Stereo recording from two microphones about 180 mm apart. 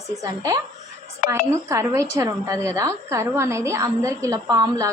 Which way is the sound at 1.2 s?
50° left (ahead or behind).